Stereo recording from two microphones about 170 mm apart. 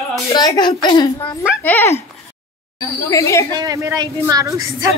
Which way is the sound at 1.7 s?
15° left (ahead or behind).